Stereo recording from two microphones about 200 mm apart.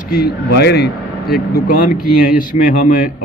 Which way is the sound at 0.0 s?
50° left (ahead or behind).